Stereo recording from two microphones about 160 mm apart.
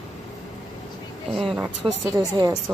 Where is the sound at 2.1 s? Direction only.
20° right (ahead or behind).